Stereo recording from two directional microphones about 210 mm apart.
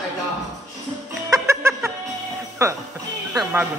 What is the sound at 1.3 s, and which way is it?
Music, 15° right (ahead or behind).